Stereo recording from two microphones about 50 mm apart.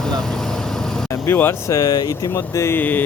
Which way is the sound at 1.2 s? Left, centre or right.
Left.